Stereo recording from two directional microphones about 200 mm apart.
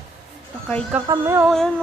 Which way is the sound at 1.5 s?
Centre (ahead or behind).